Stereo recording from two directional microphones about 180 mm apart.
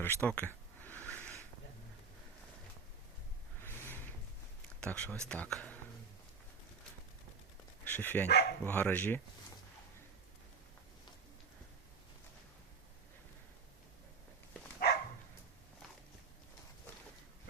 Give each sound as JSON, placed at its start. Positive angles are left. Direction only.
{"t": 0.0, "sound": "a sound", "side_deg": 10}
{"t": 3.6, "sound": "a sound", "side_deg": 10}
{"t": 4.8, "sound": "speech", "side_deg": 5}
{"t": 7.9, "sound": "speech", "side_deg": 10}
{"t": 8.3, "sound": "bow-wow", "side_deg": 65}
{"t": 8.6, "sound": "speech", "side_deg": 10}